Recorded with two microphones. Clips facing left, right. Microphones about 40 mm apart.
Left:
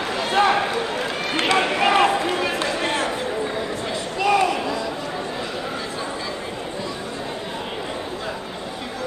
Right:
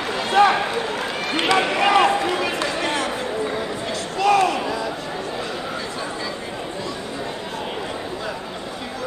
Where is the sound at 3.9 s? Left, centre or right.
Centre.